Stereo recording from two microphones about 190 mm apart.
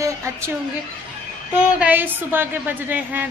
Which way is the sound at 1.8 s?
10° right (ahead or behind).